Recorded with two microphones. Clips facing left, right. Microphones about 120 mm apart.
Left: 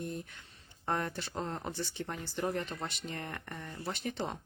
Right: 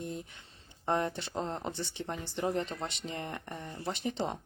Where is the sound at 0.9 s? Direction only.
25° right (ahead or behind).